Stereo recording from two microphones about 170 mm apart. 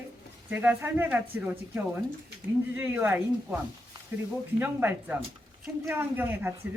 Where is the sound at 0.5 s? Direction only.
10° right (ahead or behind).